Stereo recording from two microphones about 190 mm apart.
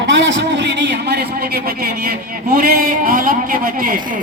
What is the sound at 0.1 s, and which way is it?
A man's voice, 75° right (ahead or behind).